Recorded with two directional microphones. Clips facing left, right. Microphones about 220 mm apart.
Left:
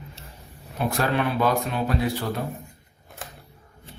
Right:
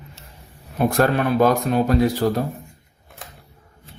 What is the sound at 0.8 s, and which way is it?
Mantra, 50° right (ahead or behind).